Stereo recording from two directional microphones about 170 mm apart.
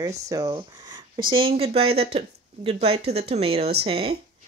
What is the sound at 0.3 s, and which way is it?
Speech, 20° right (ahead or behind).